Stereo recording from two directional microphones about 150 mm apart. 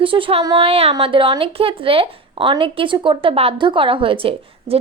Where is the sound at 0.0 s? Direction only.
35° right (ahead or behind).